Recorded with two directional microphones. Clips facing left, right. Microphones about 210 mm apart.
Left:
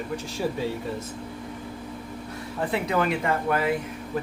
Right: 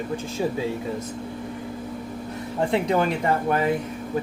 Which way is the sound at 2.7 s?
30° right (ahead or behind).